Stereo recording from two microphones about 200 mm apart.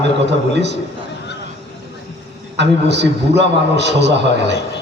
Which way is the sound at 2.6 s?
60° right (ahead or behind).